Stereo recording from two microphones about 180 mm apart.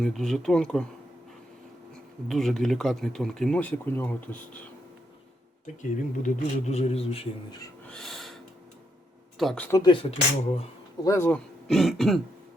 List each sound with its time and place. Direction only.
0.0 s speech: centre (ahead or behind)
2.2 s speech: centre (ahead or behind)
6.1 s speech: 40° left (ahead or behind)
7.9 s snort: 5° left (ahead or behind)
9.4 s speech: centre (ahead or behind)
9.6 s speech: 20° left (ahead or behind)
11.0 s speech: 15° left (ahead or behind)
11.7 s speech: centre (ahead or behind)